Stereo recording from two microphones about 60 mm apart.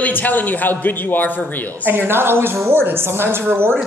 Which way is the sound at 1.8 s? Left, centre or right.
Right.